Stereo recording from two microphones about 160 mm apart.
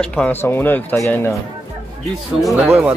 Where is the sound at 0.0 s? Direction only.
5° left (ahead or behind).